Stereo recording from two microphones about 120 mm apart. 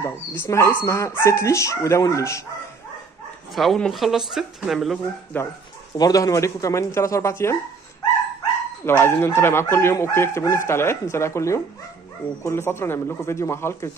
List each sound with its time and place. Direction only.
0.0 s speech: 20° left (ahead or behind)
3.5 s speech: 5° left (ahead or behind)
5.3 s speech: 15° left (ahead or behind)
5.9 s speech: 30° left (ahead or behind)
8.8 s speech: 20° left (ahead or behind)